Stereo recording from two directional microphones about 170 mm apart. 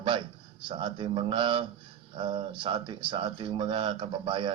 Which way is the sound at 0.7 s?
30° right (ahead or behind).